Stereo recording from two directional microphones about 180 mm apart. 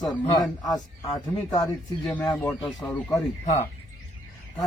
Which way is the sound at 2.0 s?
5° left (ahead or behind).